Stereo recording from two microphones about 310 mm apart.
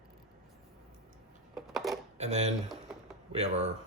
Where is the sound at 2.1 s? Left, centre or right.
Right.